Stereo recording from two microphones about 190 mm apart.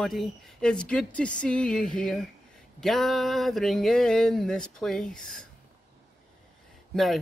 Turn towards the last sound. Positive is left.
turn(degrees=0)  # may be behind; listen again after turning